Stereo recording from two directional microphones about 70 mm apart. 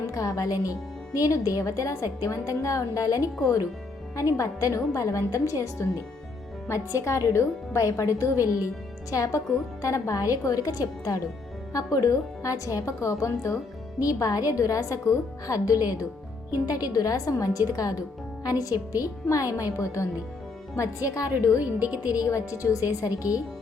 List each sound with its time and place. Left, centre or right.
0.1 s a woman's voice: left
21.6 s speech: centre
22.1 s a woman's voice: left